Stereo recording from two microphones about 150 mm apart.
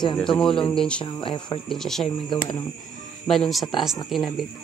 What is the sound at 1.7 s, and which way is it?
Speech, centre (ahead or behind).